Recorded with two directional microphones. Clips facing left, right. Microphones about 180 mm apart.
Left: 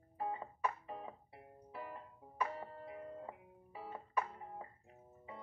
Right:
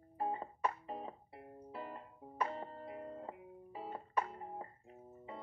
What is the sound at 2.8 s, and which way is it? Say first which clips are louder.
Music: right 2 dB; 40° right (ahead or behind).